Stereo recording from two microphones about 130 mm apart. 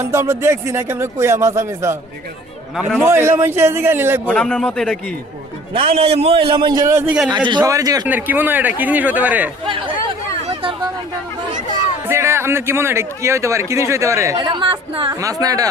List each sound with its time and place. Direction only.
0.0 s a man's voice: 20° right (ahead or behind)
3.0 s a man's voice: 20° right (ahead or behind)
4.3 s speech: 10° left (ahead or behind)
5.7 s a man's voice: 45° right (ahead or behind); by 8.0 s 30° right (ahead or behind)
8.0 s speech: 15° right (ahead or behind)
9.6 s speech: 40° right (ahead or behind)
10.5 s chatter: 40° right (ahead or behind)
12.0 s a man's voice: 20° right (ahead or behind)
14.3 s speech: 40° right (ahead or behind)
15.1 s a man's voice: 25° right (ahead or behind)